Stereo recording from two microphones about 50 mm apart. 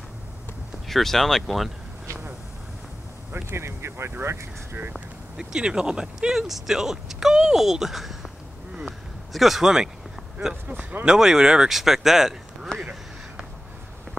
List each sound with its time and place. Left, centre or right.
0.8 s speech: centre
3.4 s speech: right
5.4 s speech: centre
11.1 s speech: centre
12.7 s speech: centre